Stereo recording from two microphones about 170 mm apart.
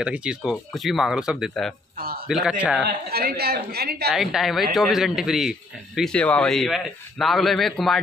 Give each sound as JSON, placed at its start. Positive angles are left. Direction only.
{"t": 0.0, "sound": "a man's voice", "side_deg": -5}
{"t": 2.0, "sound": "a sound", "side_deg": -65}
{"t": 2.2, "sound": "a man's voice", "side_deg": -5}
{"t": 3.1, "sound": "speech", "side_deg": -65}
{"t": 4.1, "sound": "a man's voice", "side_deg": 0}